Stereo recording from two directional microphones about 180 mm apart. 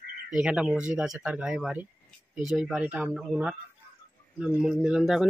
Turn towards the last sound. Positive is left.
turn(degrees=0)  # may be behind; listen again after turning